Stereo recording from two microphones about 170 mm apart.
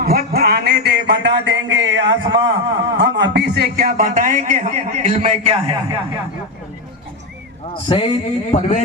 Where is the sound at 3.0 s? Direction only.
90° right; by 5.7 s 35° right (ahead or behind).